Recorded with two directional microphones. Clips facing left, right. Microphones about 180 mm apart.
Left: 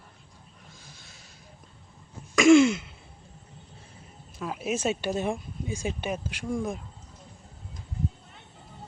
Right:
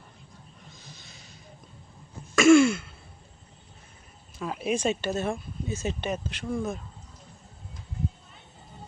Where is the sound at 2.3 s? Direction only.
15° left (ahead or behind).